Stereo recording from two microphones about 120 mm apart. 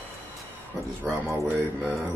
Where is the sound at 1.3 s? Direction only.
20° right (ahead or behind).